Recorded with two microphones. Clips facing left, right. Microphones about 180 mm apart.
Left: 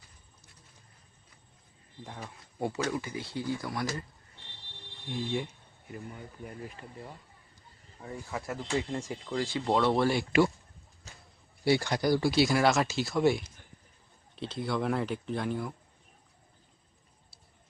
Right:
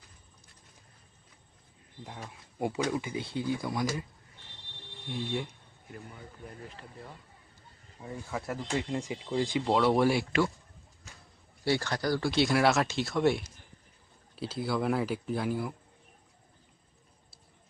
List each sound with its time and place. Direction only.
2.0 s speech: centre (ahead or behind)
2.6 s speech: 15° right (ahead or behind)
5.0 s speech: centre (ahead or behind)
8.3 s speech: centre (ahead or behind)
8.9 s speech: 15° right (ahead or behind)
11.6 s speech: 15° left (ahead or behind); by 15.7 s 5° right (ahead or behind)